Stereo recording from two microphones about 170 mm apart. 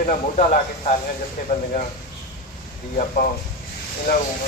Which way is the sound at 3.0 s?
45° left (ahead or behind).